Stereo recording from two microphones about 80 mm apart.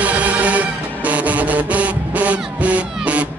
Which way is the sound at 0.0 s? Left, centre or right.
Centre.